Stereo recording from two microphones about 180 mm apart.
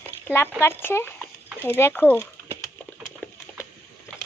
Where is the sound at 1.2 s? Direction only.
10° right (ahead or behind).